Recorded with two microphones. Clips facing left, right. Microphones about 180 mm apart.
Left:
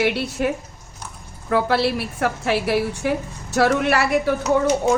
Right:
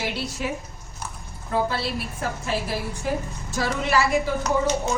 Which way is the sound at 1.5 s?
70° left (ahead or behind).